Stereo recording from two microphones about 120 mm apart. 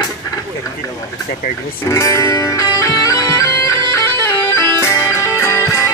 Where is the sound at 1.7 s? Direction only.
25° left (ahead or behind).